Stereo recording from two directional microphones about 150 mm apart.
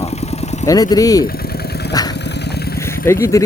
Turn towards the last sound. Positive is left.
turn(degrees=20)  # may be behind; listen again after turning